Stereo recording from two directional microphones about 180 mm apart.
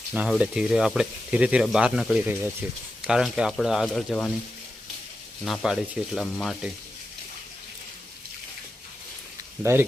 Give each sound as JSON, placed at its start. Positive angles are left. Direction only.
{"t": 0.1, "sound": "speech", "side_deg": -5}
{"t": 5.5, "sound": "speech", "side_deg": -5}
{"t": 9.7, "sound": "speech", "side_deg": -15}